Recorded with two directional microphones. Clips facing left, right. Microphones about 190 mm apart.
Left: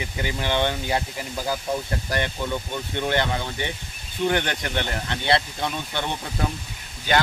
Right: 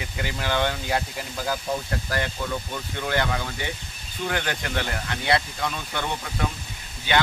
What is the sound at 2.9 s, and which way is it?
Speech, 25° left (ahead or behind).